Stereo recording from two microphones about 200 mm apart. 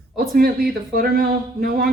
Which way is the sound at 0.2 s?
50° right (ahead or behind).